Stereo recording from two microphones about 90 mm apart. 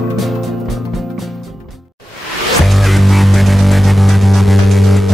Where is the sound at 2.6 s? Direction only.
Centre (ahead or behind).